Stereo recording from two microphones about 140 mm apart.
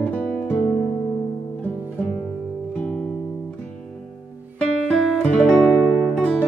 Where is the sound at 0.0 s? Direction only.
5° left (ahead or behind).